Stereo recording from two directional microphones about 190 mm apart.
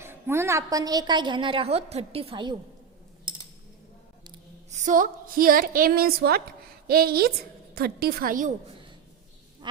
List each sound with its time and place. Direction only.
0.0 s a woman's voice: 15° right (ahead or behind)
4.7 s a woman's voice: 45° right (ahead or behind)